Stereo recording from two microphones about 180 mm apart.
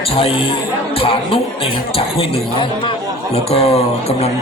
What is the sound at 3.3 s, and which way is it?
Speech, 35° left (ahead or behind).